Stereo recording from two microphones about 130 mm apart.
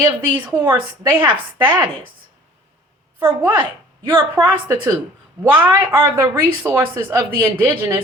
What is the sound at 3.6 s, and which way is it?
Speech, 40° right (ahead or behind).